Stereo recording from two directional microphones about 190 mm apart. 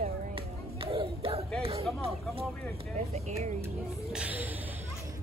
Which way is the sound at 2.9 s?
35° right (ahead or behind).